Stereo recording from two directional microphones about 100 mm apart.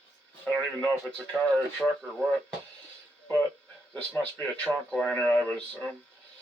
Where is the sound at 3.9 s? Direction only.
15° left (ahead or behind).